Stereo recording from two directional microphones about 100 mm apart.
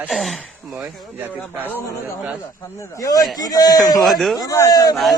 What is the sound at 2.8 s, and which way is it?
A man's voice, 35° left (ahead or behind).